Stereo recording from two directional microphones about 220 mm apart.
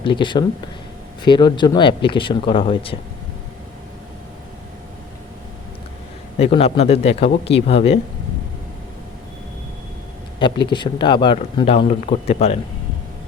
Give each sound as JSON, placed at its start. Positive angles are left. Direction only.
{"t": 0.0, "sound": "speech", "side_deg": 20}
{"t": 6.4, "sound": "speech", "side_deg": 25}
{"t": 10.4, "sound": "speech", "side_deg": 20}